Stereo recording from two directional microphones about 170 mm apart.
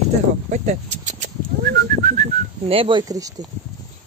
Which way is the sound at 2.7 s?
30° right (ahead or behind).